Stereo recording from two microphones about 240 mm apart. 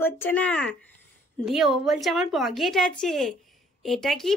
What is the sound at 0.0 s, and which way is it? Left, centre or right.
Speech, centre.